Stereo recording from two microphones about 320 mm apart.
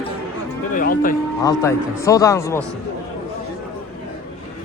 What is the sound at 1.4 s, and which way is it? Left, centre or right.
Speech, centre.